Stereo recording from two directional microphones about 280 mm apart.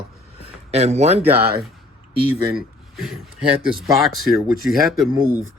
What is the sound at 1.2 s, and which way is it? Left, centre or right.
Speech, centre.